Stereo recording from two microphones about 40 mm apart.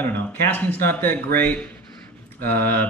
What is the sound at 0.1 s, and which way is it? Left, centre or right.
Speech, left.